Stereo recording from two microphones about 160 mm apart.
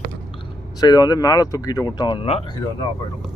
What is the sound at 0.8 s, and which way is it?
Speech, 25° left (ahead or behind).